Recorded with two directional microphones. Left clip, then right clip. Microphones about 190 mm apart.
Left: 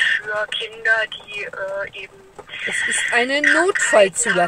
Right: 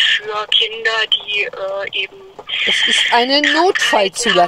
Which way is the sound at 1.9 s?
35° right (ahead or behind).